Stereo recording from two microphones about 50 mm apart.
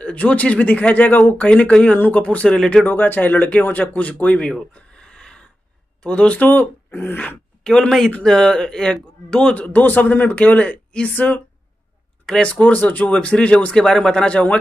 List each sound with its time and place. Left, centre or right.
0.0 s speech: left
2.0 s a man's voice: left
2.2 s speech: left
2.5 s speech: centre
2.9 s a man's voice: left
4.5 s a sound: centre
6.0 s speech: left
6.4 s a man's voice: left
6.9 s wail: left
8.2 s speech: centre
9.6 s a man's voice: left
12.3 s speech: left
13.7 s speech: centre